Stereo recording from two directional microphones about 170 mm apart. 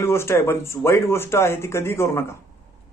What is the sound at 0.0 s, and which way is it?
A man's voice, 15° left (ahead or behind).